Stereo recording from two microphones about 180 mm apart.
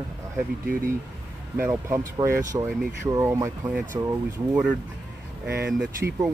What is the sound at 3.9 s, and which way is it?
Speech, 20° right (ahead or behind).